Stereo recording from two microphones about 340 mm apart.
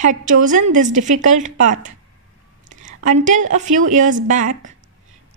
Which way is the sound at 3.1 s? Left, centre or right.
Right.